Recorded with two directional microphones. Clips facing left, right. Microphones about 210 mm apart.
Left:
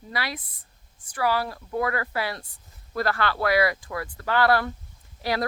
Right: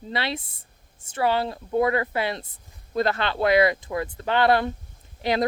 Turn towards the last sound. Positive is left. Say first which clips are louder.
# right 4 dB
turn(degrees=-20)  # may be behind; listen again after turning